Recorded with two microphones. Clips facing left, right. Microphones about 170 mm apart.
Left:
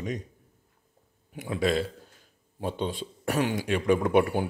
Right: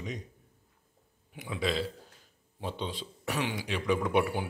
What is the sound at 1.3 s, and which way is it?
Speech, 50° left (ahead or behind).